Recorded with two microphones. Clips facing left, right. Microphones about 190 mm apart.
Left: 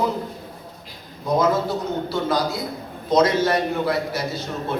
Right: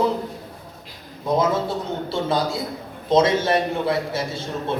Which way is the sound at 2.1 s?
25° right (ahead or behind).